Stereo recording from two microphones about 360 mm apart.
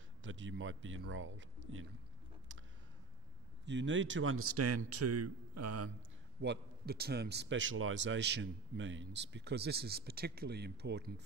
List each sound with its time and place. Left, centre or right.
0.2 s a man's voice: right
3.6 s a man's voice: right
6.4 s a man's voice: right